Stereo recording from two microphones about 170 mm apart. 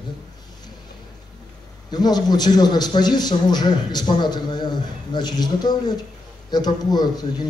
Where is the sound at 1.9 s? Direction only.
25° left (ahead or behind).